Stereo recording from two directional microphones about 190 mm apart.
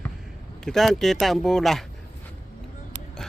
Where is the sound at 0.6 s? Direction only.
Centre (ahead or behind).